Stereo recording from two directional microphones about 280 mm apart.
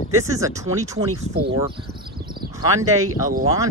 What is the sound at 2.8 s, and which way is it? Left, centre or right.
Speech, right.